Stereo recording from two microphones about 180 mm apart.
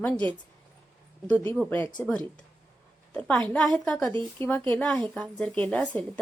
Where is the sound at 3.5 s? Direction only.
5° left (ahead or behind).